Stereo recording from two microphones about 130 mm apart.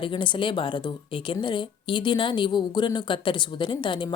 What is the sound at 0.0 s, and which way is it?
A woman's voice, 40° left (ahead or behind).